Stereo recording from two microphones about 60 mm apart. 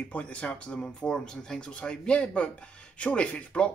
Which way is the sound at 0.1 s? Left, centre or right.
Left.